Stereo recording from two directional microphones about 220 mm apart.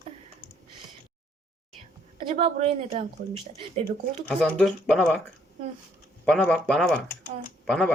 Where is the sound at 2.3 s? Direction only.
25° right (ahead or behind).